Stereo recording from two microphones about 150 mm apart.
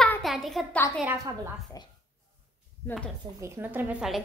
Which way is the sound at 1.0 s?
20° right (ahead or behind).